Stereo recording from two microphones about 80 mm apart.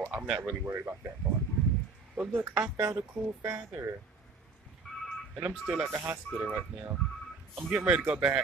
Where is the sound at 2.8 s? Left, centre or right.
Right.